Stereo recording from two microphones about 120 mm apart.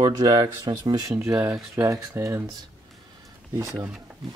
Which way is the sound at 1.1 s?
20° right (ahead or behind).